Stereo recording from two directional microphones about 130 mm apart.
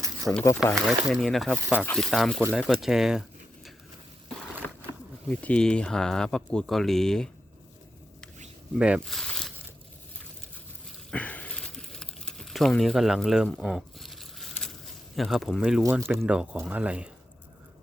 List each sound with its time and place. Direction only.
0.3 s speech: centre (ahead or behind)
5.3 s speech: 10° left (ahead or behind)
8.8 s speech: 5° right (ahead or behind)
11.1 s crumpling: 10° left (ahead or behind)
15.9 s speech: 20° right (ahead or behind)
16.2 s speech: 10° right (ahead or behind)